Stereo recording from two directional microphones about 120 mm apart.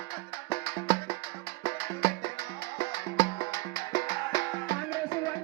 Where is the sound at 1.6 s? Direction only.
40° left (ahead or behind).